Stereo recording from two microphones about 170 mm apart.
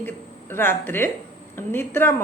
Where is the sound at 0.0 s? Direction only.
10° left (ahead or behind).